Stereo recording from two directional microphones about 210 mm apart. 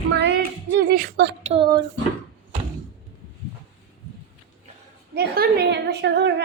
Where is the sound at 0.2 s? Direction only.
55° right (ahead or behind).